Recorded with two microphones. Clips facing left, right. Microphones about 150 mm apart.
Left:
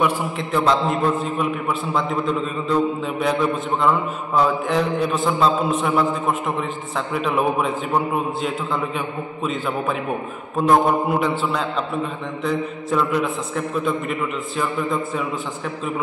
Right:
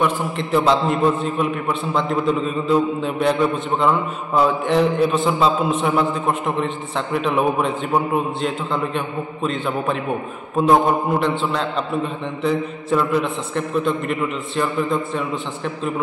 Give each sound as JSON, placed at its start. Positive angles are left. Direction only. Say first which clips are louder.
{"t": 0.0, "sound": "a man's voice", "louder": "right 1 dB", "side_deg": 0}